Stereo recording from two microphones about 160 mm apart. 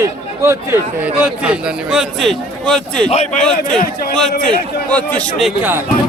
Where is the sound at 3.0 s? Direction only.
45° left (ahead or behind).